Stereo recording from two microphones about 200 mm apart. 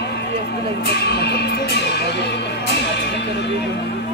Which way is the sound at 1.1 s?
55° left (ahead or behind).